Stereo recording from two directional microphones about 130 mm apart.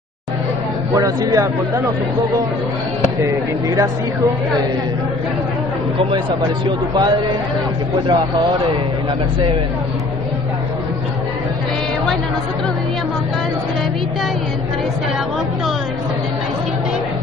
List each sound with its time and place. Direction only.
0.9 s speech: 25° right (ahead or behind)
3.3 s speech: 25° right (ahead or behind)
8.1 s speech: 30° right (ahead or behind)